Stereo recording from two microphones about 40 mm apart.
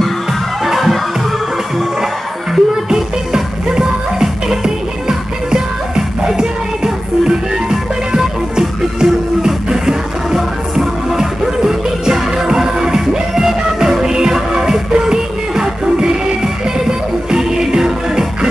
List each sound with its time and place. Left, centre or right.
0.7 s music: centre
2.5 s music: centre